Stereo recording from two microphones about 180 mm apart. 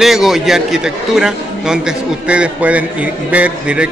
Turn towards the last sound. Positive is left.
turn(degrees=-5)  # may be behind; listen again after turning